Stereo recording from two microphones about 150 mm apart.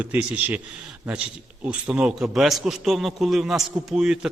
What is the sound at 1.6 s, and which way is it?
Speech, 10° right (ahead or behind).